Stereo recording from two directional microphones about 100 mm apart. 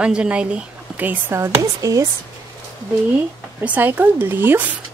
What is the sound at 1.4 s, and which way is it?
Speech, 35° right (ahead or behind).